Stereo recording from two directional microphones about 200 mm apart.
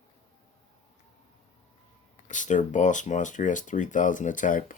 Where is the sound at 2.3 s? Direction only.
40° left (ahead or behind).